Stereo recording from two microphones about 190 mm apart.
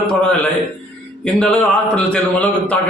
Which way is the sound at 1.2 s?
5° left (ahead or behind).